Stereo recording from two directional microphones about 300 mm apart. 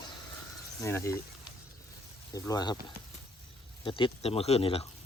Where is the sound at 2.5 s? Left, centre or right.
Centre.